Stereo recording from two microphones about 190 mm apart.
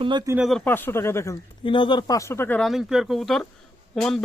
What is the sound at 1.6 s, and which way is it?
Speech, 25° left (ahead or behind).